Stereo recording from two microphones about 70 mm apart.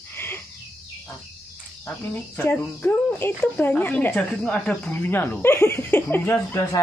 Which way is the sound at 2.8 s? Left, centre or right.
Left.